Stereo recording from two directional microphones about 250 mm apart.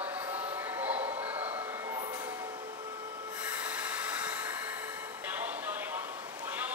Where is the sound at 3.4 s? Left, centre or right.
Centre.